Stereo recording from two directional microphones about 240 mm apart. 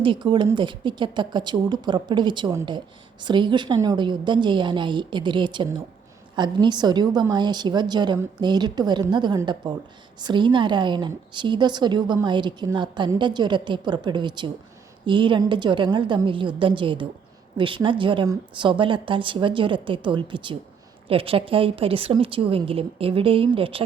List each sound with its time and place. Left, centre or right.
0.0 s a woman's voice: right